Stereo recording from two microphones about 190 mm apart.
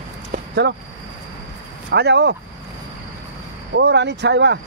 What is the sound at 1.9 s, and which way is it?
Speech, 60° right (ahead or behind).